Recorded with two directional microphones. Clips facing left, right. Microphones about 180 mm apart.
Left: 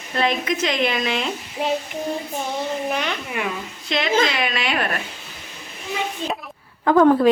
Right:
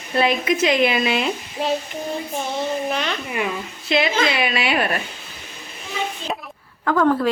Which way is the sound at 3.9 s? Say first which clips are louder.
Right 1 dB; 5° right (ahead or behind).